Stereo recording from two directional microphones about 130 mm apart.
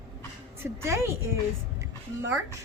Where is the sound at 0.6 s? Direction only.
20° right (ahead or behind).